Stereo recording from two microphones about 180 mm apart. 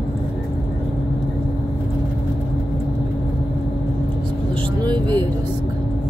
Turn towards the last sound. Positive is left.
turn(degrees=-25)  # may be behind; listen again after turning